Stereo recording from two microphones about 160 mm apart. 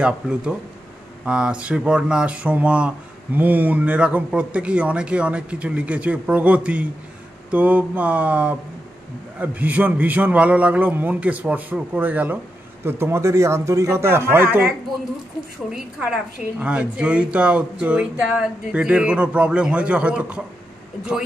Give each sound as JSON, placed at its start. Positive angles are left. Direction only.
{"t": 0.0, "sound": "speech", "side_deg": -5}
{"t": 15.7, "sound": "a woman's voice", "side_deg": -5}